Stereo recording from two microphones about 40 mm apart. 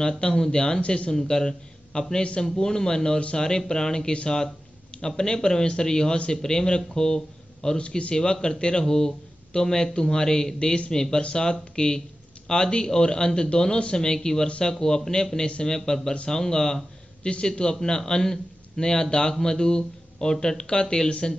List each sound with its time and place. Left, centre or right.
0.4 s speech: centre
1.1 s a man's voice: centre